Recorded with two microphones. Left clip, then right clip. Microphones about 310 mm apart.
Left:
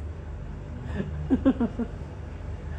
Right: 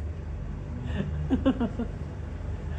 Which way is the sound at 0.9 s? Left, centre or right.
Centre.